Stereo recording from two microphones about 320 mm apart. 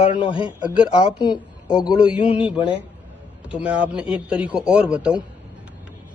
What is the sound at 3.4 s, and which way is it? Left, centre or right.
A man's voice, centre.